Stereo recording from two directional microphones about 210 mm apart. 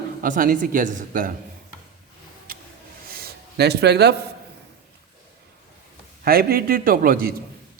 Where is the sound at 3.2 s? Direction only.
50° right (ahead or behind).